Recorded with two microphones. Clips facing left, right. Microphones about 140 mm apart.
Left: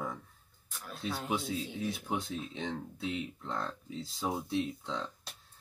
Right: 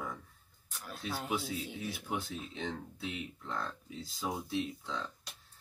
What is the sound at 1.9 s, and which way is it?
Speech, 25° left (ahead or behind).